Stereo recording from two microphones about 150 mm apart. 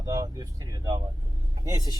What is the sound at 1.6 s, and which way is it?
Speech, 20° right (ahead or behind).